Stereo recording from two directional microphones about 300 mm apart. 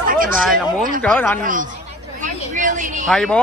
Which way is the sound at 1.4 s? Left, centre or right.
Right.